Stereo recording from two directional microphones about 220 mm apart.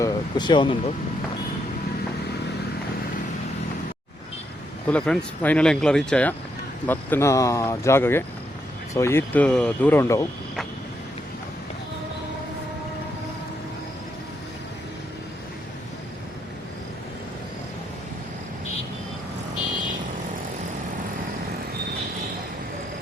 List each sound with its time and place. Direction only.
0.0 s speech: 20° left (ahead or behind)
4.9 s speech: 5° left (ahead or behind)